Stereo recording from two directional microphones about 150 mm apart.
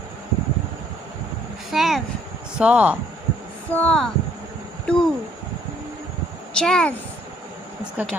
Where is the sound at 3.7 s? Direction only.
10° left (ahead or behind).